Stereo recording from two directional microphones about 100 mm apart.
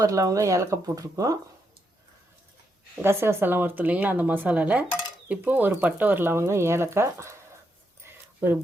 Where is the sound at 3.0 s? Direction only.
25° right (ahead or behind).